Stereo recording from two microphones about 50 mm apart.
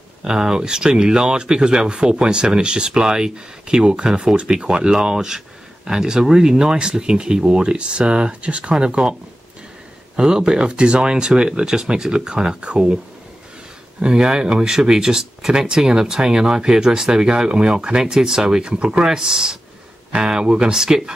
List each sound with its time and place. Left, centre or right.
0.2 s speech: centre
10.1 s speech: centre